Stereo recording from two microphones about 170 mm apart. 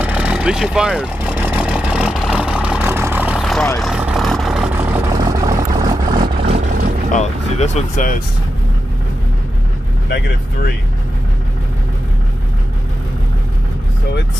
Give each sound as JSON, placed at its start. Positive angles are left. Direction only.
{"t": 0.0, "sound": "vehicle", "side_deg": -5}
{"t": 5.1, "sound": "vehicle", "side_deg": -20}
{"t": 6.1, "sound": "vehicle", "side_deg": -30}
{"t": 7.1, "sound": "speech", "side_deg": 40}
{"t": 10.0, "sound": "speech", "side_deg": 70}